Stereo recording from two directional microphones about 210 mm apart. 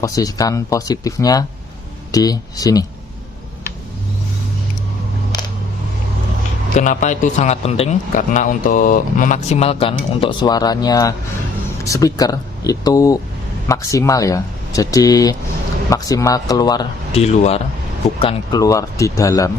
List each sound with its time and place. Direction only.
0.0 s speech: 15° left (ahead or behind)
6.7 s a man's voice: 35° left (ahead or behind); by 17.2 s 20° left (ahead or behind)
17.2 s a man's voice: 30° left (ahead or behind)